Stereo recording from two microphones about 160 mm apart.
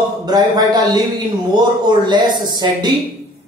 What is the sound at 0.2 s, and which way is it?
Speech, 25° right (ahead or behind).